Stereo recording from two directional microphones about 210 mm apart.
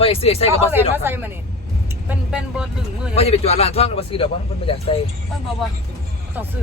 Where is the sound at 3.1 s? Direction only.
30° left (ahead or behind).